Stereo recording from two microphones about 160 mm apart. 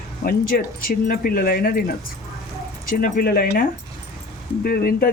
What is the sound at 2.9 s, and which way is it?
Speech, 65° left (ahead or behind).